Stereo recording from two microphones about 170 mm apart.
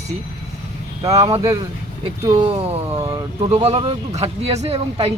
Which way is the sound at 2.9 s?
15° right (ahead or behind).